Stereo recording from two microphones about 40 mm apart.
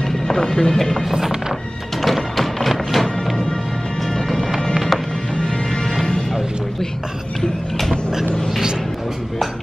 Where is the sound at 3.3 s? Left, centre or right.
Centre.